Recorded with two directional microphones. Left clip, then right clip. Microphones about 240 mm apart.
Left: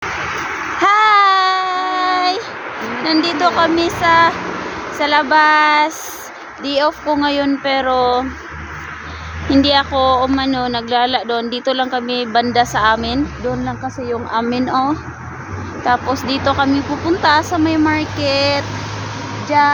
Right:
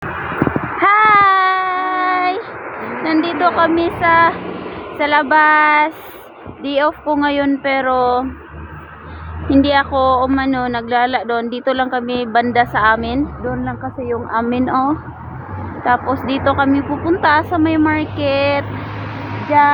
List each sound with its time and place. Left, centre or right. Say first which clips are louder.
0.8 s baby cry: right 1 dB; centre
2.7 s a sound: left 1 dB; centre
3.2 s child singing: even; centre
3.9 s a sound: left 1 dB; centre
4.9 s speech: even; centre
9.5 s speech: even; centre
16.8 s speech: even; centre
17.1 s speech: even; centre
19.5 s child singing: right 1 dB; centre